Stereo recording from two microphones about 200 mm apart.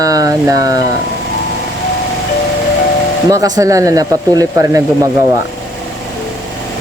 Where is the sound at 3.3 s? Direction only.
15° right (ahead or behind).